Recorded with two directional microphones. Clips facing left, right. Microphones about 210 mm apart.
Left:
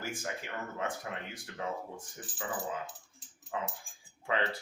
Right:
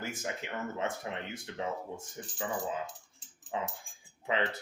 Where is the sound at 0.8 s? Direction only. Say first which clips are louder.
Even; 25° right (ahead or behind).